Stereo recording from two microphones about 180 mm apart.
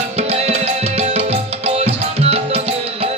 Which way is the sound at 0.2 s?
35° right (ahead or behind).